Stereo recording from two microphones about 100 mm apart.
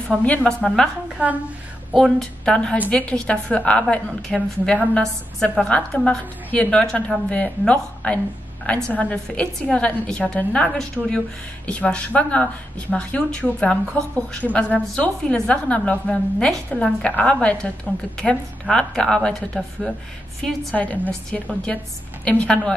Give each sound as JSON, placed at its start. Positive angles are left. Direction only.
{"t": 0.1, "sound": "a woman's voice", "side_deg": 15}
{"t": 1.1, "sound": "a woman's voice", "side_deg": -15}
{"t": 2.0, "sound": "a woman's voice", "side_deg": 0}